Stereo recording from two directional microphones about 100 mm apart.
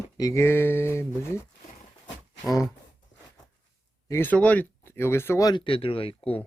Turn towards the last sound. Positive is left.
turn(degrees=70)  # may be behind; listen again after turning